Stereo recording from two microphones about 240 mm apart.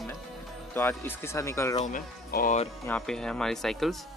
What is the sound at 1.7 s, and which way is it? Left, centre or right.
Speech, left.